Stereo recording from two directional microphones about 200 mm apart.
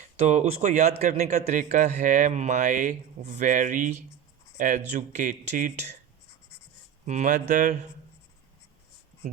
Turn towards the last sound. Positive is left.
turn(degrees=-40)  # may be behind; listen again after turning